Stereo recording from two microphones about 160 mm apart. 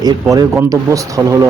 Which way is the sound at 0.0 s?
20° right (ahead or behind).